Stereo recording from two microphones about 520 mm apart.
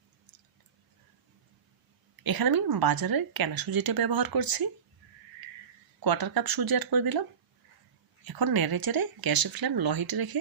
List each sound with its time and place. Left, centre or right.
2.2 s speech: right
6.0 s speech: right